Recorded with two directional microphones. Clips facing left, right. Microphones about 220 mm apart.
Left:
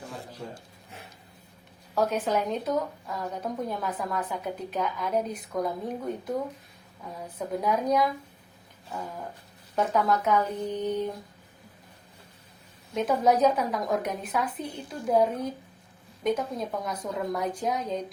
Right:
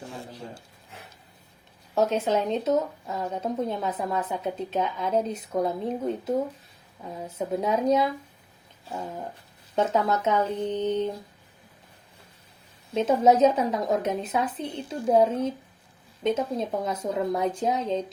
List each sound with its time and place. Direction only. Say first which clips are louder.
2.0 s speech: right 2 dB; 25° right (ahead or behind)
12.9 s speech: right 3 dB; 25° right (ahead or behind)